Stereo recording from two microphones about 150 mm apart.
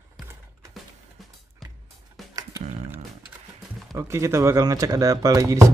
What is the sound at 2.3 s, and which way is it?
Music, 25° right (ahead or behind).